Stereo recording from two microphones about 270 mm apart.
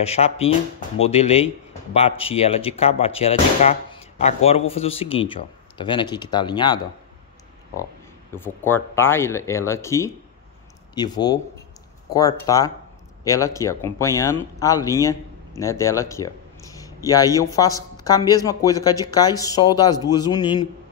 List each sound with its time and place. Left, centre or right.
0.0 s speech: left
8.3 s speech: centre